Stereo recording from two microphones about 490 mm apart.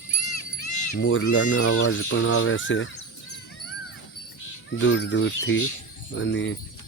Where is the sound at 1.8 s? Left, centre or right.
Left.